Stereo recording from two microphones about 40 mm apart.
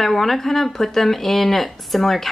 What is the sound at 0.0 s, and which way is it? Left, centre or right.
A woman's voice, centre.